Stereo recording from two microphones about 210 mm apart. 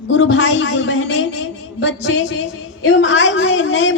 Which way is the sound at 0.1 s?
60° left (ahead or behind).